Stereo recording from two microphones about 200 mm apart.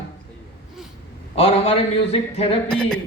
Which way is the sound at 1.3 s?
30° left (ahead or behind).